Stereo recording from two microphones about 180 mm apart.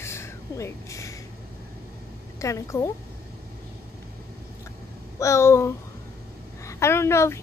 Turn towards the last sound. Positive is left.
turn(degrees=15)  # may be behind; listen again after turning